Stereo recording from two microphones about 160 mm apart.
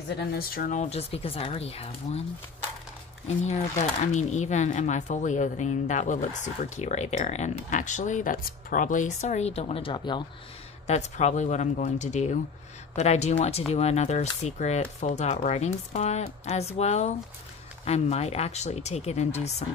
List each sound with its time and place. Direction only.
0.3 s speech: 70° left (ahead or behind); by 2.2 s 40° left (ahead or behind)
3.4 s speech: 45° left (ahead or behind); by 10.2 s 30° left (ahead or behind)
10.9 s speech: 45° left (ahead or behind)